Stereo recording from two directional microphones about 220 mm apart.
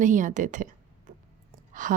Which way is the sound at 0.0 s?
35° right (ahead or behind).